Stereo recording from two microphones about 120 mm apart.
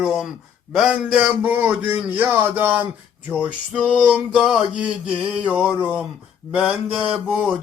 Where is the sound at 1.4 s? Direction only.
15° right (ahead or behind).